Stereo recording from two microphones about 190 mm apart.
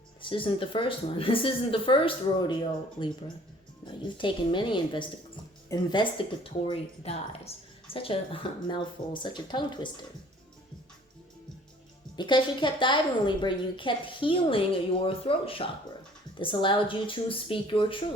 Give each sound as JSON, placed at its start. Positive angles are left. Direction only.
{"t": 0.2, "sound": "a woman's voice", "side_deg": 25}
{"t": 12.1, "sound": "a woman's voice", "side_deg": 25}